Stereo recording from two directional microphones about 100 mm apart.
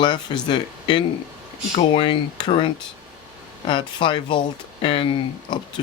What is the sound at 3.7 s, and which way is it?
Speech, 50° left (ahead or behind).